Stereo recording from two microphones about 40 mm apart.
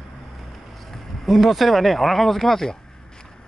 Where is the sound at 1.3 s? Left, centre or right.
Centre.